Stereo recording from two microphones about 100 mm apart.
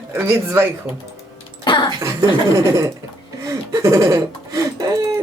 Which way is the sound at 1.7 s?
50° left (ahead or behind).